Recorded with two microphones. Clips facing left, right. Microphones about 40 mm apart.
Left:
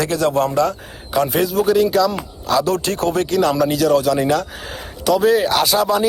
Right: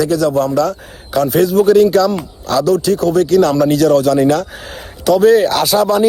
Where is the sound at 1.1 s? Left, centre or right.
Centre.